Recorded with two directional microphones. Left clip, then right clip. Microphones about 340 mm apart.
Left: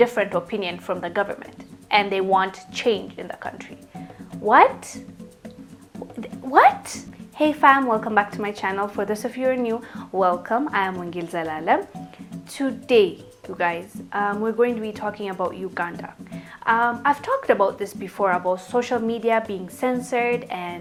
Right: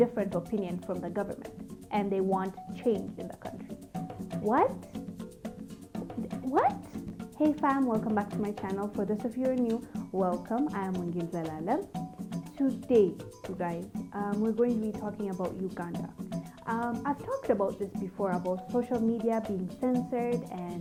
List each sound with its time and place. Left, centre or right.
0.0 s a woman's voice: centre
6.5 s a woman's voice: centre